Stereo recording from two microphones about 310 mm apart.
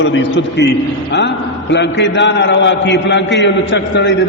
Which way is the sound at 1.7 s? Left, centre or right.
Left.